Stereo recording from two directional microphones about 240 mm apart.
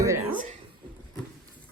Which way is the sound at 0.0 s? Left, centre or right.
Centre.